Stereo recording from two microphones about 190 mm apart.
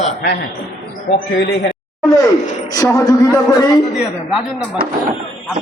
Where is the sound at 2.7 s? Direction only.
20° left (ahead or behind).